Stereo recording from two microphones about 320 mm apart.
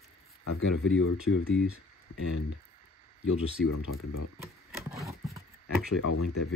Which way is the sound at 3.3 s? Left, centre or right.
Left.